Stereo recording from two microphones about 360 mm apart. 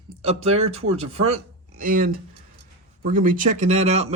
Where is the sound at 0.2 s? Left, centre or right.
Centre.